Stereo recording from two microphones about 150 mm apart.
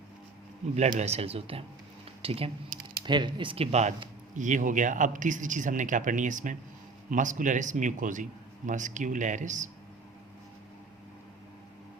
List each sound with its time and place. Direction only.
0.8 s speech: 50° right (ahead or behind)
4.4 s a man's voice: 55° right (ahead or behind)